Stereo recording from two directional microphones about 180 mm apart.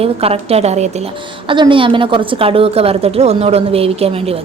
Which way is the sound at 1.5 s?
30° right (ahead or behind).